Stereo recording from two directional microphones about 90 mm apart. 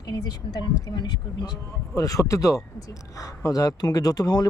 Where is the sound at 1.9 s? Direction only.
40° left (ahead or behind).